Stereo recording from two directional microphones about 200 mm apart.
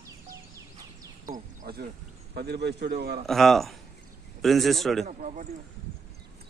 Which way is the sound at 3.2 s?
Centre (ahead or behind).